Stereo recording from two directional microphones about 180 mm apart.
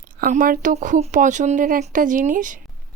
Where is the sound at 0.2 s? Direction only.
50° right (ahead or behind).